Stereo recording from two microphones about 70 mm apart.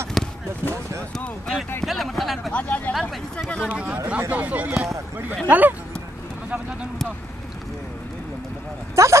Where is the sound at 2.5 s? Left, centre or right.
Centre.